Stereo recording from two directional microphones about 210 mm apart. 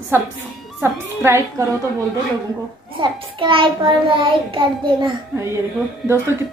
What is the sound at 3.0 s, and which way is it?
A child's voice, 20° right (ahead or behind).